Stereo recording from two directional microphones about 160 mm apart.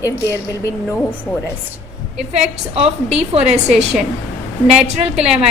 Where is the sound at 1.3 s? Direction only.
10° left (ahead or behind).